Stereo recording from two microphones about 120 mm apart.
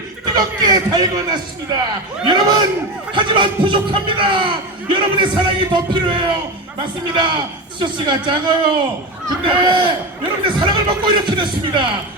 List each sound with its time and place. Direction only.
0.3 s a man's voice: 35° right (ahead or behind)